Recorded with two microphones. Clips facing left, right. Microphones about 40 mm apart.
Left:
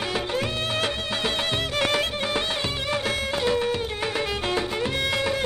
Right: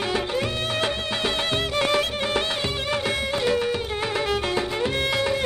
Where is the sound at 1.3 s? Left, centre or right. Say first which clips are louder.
Right 1 dB; right.